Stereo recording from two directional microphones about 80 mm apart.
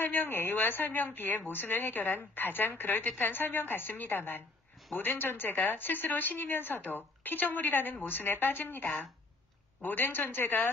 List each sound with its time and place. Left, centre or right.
0.0 s speech: left